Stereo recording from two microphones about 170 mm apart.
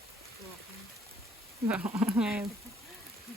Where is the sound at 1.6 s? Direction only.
10° right (ahead or behind).